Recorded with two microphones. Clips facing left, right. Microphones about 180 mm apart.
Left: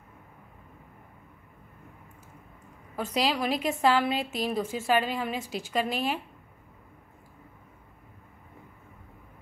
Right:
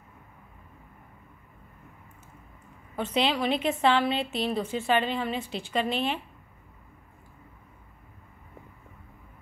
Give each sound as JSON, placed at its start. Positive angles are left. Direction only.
{"t": 3.0, "sound": "a woman's voice", "side_deg": 0}